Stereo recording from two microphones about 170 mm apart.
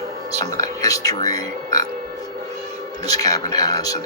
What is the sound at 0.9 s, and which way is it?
Speech, 20° left (ahead or behind).